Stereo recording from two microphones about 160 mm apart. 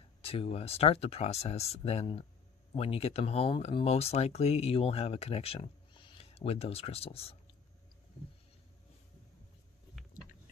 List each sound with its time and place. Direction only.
0.2 s speech: 35° left (ahead or behind)